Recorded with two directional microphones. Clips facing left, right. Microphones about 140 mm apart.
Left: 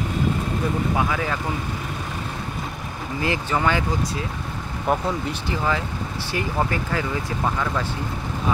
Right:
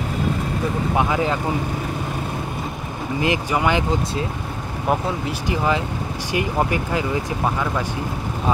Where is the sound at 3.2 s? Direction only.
15° right (ahead or behind).